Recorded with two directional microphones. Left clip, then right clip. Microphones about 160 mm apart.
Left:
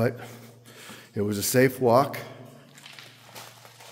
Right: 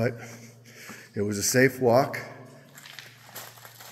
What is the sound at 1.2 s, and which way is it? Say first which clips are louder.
Speech: even; 20° left (ahead or behind).